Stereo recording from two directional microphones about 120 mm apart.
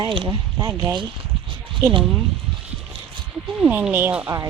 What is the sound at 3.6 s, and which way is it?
Speech, 15° right (ahead or behind).